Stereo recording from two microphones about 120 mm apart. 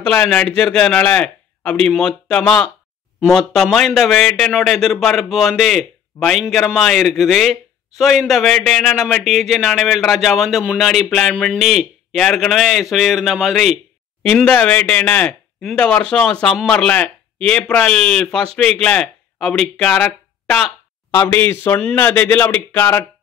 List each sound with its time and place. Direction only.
0.0 s a man's voice: 10° left (ahead or behind)
21.1 s speech: 20° left (ahead or behind)